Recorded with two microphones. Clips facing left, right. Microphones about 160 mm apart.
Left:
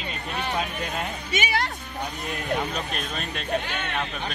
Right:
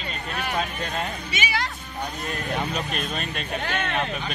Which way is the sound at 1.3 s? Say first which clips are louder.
Left 5 dB; 55° left (ahead or behind).